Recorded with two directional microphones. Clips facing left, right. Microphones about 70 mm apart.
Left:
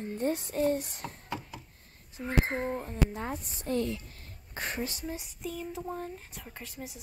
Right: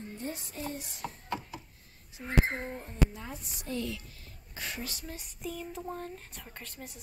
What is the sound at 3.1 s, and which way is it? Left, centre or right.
A woman's voice, left.